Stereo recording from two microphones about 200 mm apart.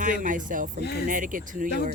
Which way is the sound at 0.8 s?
55° left (ahead or behind).